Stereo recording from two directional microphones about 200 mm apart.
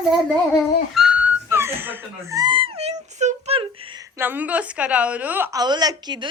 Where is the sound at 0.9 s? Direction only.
Centre (ahead or behind); by 4.0 s 25° right (ahead or behind).